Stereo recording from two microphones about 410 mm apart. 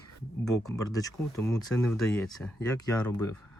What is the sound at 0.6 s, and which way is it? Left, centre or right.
Speech, centre.